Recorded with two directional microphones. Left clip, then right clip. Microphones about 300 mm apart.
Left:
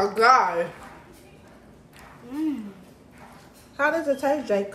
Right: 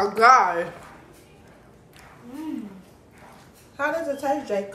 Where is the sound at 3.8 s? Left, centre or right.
Left.